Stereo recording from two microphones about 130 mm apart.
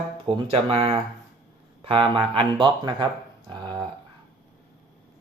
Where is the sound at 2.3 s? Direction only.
40° right (ahead or behind).